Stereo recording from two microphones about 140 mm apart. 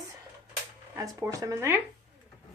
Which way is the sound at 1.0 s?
25° right (ahead or behind).